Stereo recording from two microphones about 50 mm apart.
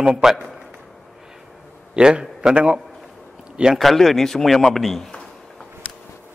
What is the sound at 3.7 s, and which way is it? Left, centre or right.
Speech, centre.